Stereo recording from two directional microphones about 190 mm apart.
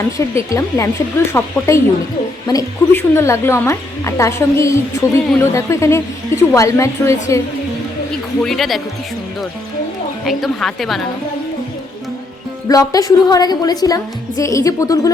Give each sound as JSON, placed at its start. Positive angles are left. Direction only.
{"t": 0.2, "sound": "a woman's voice", "side_deg": 15}
{"t": 8.4, "sound": "a woman's voice", "side_deg": 0}
{"t": 10.2, "sound": "a woman's voice", "side_deg": 0}
{"t": 12.6, "sound": "a woman's voice", "side_deg": 20}